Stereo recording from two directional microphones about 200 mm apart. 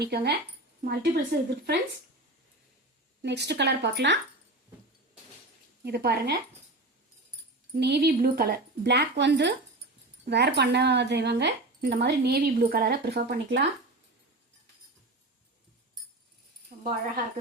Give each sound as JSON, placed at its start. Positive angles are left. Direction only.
{"t": 0.0, "sound": "a woman's voice", "side_deg": -55}
{"t": 3.2, "sound": "speech", "side_deg": -60}
{"t": 5.8, "sound": "a woman's voice", "side_deg": -55}
{"t": 7.8, "sound": "speech", "side_deg": -55}
{"t": 16.7, "sound": "a sound", "side_deg": -35}